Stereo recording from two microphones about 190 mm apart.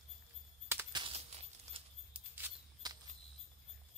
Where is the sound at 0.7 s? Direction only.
15° right (ahead or behind).